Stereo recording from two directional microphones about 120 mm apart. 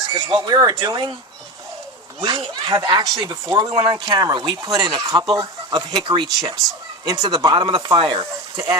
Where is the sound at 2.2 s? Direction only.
40° right (ahead or behind).